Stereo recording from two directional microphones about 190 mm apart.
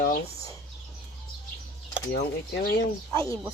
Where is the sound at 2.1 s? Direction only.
50° left (ahead or behind).